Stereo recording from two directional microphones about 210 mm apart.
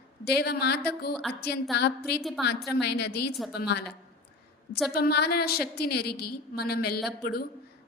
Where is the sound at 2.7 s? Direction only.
55° left (ahead or behind).